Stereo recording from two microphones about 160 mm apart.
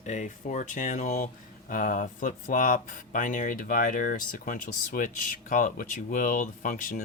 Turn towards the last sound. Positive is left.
turn(degrees=60)  # may be behind; listen again after turning